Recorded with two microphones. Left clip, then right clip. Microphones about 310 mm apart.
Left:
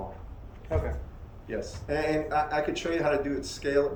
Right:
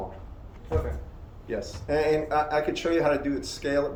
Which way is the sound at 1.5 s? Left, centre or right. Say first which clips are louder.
Right 3 dB; centre.